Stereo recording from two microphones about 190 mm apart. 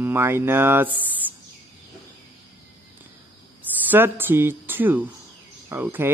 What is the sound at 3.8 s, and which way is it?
Speech, 10° right (ahead or behind).